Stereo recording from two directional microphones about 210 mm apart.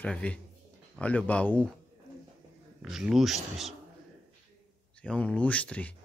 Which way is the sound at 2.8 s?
Centre (ahead or behind).